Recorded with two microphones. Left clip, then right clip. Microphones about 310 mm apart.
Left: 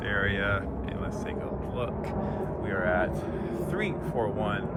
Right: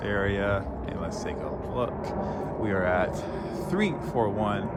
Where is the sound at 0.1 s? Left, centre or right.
Centre.